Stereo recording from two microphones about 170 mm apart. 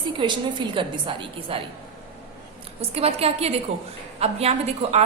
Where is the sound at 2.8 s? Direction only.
35° right (ahead or behind).